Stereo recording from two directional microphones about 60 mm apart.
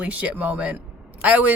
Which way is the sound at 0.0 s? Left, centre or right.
Right.